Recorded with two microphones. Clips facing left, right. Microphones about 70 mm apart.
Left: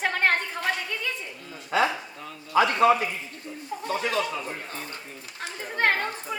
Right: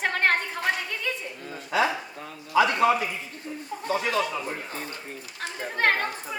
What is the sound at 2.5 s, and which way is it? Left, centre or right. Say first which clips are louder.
Speech: even; left.